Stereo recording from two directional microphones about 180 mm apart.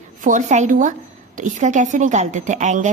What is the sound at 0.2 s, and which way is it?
A woman's voice, 45° right (ahead or behind).